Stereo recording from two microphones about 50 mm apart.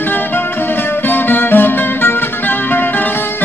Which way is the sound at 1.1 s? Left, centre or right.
Left.